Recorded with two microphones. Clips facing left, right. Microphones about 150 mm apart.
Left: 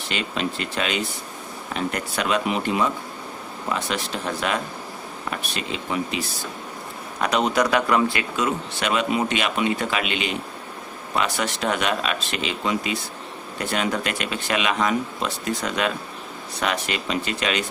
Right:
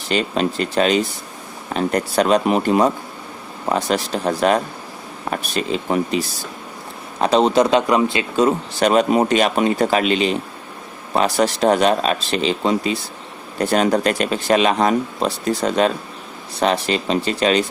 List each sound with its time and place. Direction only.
0.1 s speech: 40° right (ahead or behind); by 8.3 s 20° right (ahead or behind)
8.4 s speech: 35° right (ahead or behind)